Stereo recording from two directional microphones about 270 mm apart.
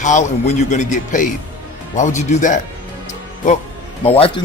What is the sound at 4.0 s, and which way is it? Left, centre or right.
Speech, left.